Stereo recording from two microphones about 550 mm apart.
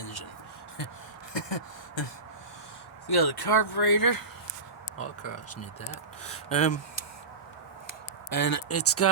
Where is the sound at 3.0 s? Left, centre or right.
Left.